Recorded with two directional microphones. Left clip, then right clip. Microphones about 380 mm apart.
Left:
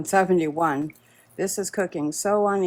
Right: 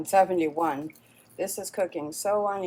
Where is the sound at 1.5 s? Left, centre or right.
Left.